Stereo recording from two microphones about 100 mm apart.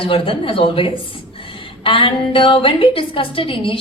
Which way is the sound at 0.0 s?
70° left (ahead or behind).